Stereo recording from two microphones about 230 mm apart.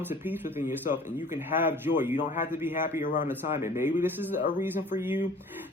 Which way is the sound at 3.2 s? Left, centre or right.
Centre.